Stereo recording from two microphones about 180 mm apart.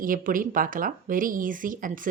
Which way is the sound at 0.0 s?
50° right (ahead or behind).